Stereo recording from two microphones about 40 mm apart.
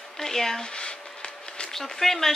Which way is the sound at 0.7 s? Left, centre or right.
Left.